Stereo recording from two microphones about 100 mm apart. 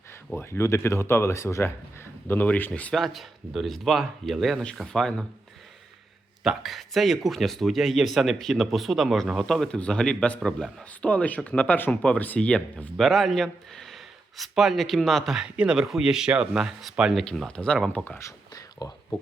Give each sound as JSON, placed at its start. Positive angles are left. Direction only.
{"t": 0.3, "sound": "speech", "side_deg": 25}
{"t": 2.2, "sound": "speech", "side_deg": 20}
{"t": 2.9, "sound": "speech", "side_deg": 0}
{"t": 6.4, "sound": "speech", "side_deg": -5}
{"t": 18.2, "sound": "whispering", "side_deg": 35}